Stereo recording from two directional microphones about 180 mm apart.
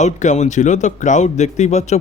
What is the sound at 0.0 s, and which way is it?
Speech, 40° left (ahead or behind).